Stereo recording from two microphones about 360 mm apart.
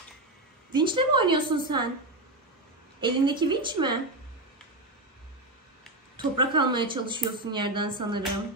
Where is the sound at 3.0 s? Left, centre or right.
Centre.